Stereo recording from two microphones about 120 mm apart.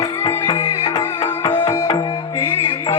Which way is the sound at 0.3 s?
25° left (ahead or behind).